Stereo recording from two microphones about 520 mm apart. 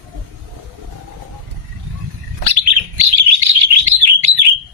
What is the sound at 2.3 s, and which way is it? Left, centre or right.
Chirp, right.